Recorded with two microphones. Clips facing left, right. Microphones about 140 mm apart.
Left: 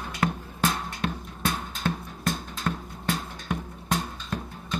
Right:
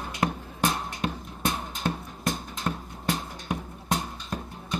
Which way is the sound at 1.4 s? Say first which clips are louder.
Even; 15° right (ahead or behind).